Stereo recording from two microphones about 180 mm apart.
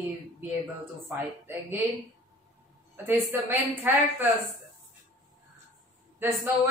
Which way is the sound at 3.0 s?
10° right (ahead or behind).